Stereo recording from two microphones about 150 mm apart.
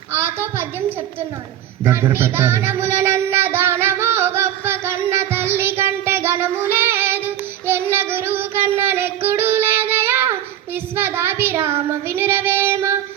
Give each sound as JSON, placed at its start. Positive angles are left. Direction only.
{"t": 0.1, "sound": "a sound", "side_deg": -15}
{"t": 1.8, "sound": "child singing", "side_deg": -15}
{"t": 5.1, "sound": "music", "side_deg": -15}
{"t": 6.4, "sound": "child singing", "side_deg": -15}